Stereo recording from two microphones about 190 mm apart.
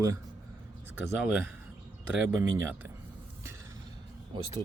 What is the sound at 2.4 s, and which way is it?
Speech, 10° right (ahead or behind).